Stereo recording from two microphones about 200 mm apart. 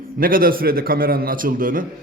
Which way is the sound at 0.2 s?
45° right (ahead or behind).